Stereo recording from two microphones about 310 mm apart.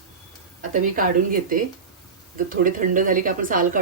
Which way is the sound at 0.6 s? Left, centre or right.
Right.